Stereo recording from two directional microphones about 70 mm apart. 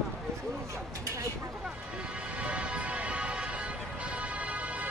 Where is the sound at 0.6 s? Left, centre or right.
Right.